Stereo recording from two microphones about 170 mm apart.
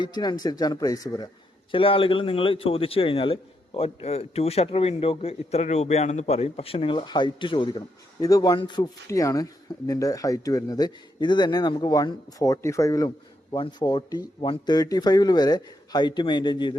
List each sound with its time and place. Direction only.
0.0 s speech: 25° left (ahead or behind)
1.7 s a man's voice: 30° left (ahead or behind)